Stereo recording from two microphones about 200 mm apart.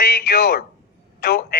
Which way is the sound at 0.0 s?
55° left (ahead or behind).